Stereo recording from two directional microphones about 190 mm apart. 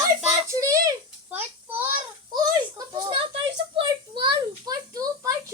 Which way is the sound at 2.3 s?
20° right (ahead or behind).